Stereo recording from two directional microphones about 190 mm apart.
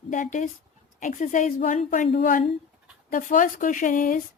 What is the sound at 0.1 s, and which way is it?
Speech, 40° left (ahead or behind).